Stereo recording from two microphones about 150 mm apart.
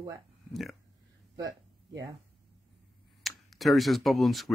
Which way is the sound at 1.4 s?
25° right (ahead or behind).